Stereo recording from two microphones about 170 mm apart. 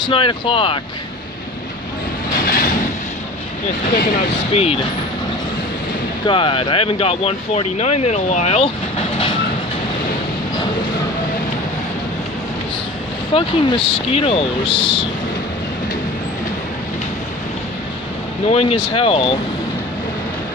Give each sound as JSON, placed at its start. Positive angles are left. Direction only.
{"t": 0.0, "sound": "speech", "side_deg": 30}
{"t": 2.4, "sound": "train", "side_deg": 60}
{"t": 3.9, "sound": "speech", "side_deg": 65}
{"t": 6.2, "sound": "speech", "side_deg": 30}
{"t": 13.3, "sound": "speech", "side_deg": 30}
{"t": 18.5, "sound": "speech", "side_deg": 35}